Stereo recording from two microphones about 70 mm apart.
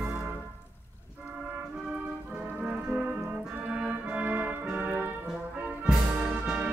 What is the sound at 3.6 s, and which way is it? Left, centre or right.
Organ, centre.